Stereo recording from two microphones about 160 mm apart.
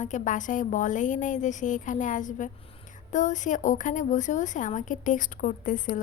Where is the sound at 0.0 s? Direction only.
50° left (ahead or behind).